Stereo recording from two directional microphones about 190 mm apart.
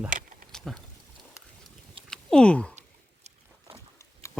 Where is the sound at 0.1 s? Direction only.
45° right (ahead or behind).